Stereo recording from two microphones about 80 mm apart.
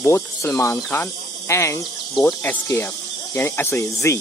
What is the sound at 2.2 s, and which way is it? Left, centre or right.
Speech, centre.